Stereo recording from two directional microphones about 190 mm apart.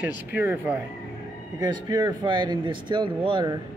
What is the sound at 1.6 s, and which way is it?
Speech, 20° right (ahead or behind).